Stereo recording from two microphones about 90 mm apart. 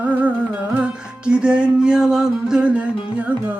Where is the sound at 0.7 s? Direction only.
15° right (ahead or behind).